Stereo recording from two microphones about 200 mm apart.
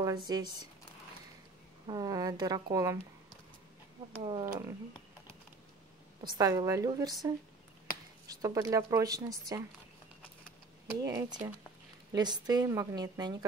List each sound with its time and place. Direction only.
0.3 s speech: 20° right (ahead or behind)
1.9 s a woman's voice: 20° right (ahead or behind)
4.2 s speech: 20° right (ahead or behind)
6.3 s a woman's voice: 15° right (ahead or behind)
10.9 s a woman's voice: 15° right (ahead or behind)